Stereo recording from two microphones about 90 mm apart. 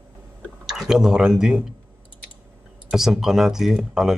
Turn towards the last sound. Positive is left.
turn(degrees=-5)  # may be behind; listen again after turning